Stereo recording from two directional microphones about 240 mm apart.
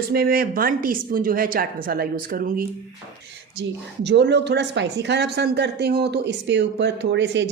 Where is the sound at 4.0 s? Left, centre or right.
Right.